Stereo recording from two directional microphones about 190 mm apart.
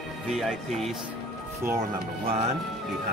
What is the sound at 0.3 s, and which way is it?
Speech, centre (ahead or behind).